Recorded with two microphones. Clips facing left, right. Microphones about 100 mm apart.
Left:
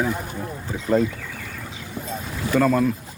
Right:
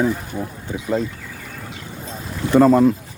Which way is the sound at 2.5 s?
25° right (ahead or behind).